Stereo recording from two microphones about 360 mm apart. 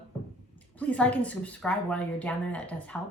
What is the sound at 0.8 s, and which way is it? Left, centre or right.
A woman's voice, centre.